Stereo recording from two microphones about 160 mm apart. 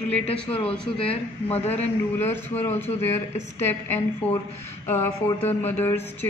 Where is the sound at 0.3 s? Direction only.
35° left (ahead or behind).